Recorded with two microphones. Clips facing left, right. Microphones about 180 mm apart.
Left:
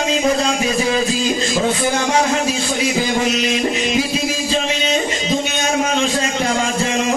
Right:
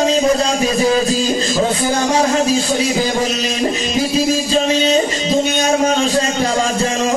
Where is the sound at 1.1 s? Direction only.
35° right (ahead or behind).